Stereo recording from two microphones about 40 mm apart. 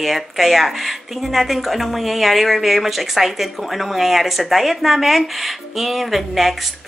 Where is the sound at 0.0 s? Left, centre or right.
Centre.